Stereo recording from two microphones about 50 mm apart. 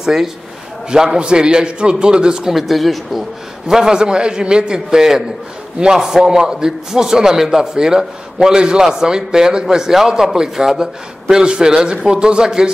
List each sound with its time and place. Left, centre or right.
0.0 s a man's voice: centre
2.6 s speech: centre
3.6 s a man's voice: centre